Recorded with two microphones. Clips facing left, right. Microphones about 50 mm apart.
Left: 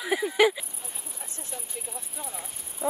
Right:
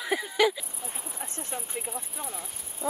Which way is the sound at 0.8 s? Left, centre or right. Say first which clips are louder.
Right 4 dB; right.